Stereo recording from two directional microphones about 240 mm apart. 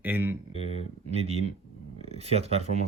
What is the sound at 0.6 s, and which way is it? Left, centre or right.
Speech, left.